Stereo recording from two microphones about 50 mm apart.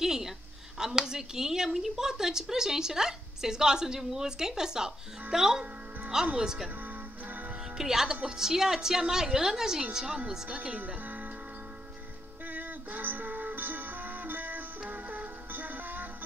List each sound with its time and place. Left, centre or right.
0.0 s a sound: centre
0.7 s a woman's voice: centre
7.7 s a woman's voice: centre
10.8 s speech: right
12.4 s music: right